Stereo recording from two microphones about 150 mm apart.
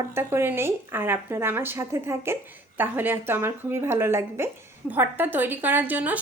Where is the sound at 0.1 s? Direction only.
15° right (ahead or behind).